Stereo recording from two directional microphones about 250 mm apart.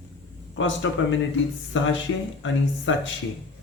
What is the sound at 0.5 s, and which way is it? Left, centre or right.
Speech, left.